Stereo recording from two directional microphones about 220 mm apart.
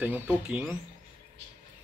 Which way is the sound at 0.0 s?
5° right (ahead or behind).